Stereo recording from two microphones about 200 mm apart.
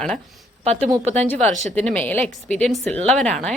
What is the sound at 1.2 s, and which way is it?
A woman's voice, 5° left (ahead or behind).